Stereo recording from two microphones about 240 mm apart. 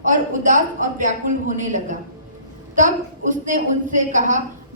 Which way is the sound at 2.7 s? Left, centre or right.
Right.